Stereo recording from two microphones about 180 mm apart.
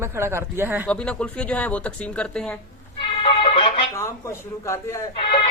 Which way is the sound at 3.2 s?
30° left (ahead or behind).